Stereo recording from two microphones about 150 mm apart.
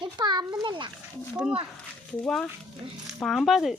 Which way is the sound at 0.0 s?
30° right (ahead or behind).